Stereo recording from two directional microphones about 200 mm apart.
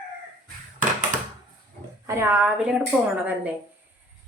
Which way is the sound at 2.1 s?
15° right (ahead or behind).